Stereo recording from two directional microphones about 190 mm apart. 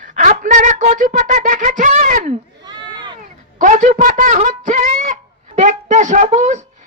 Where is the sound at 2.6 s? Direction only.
25° right (ahead or behind).